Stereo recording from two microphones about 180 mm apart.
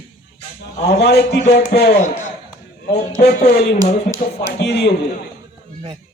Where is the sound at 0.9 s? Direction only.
65° left (ahead or behind).